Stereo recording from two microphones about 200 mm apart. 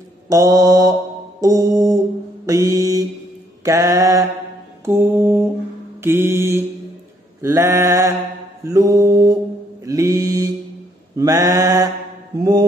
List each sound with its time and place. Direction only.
0.3 s mantra: 15° right (ahead or behind)